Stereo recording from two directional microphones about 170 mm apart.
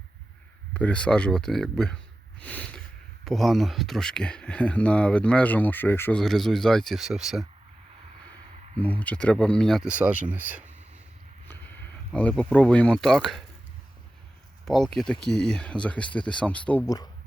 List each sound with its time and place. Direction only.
0.7 s speech: 5° left (ahead or behind)
2.4 s a sound: 10° left (ahead or behind)
3.2 s speech: centre (ahead or behind)
8.8 s speech: 10° left (ahead or behind); by 10.6 s 10° right (ahead or behind)
11.4 s a sound: 10° left (ahead or behind)
12.5 s speech: 5° left (ahead or behind)
14.6 s speech: centre (ahead or behind)
16.8 s speech: 20° left (ahead or behind)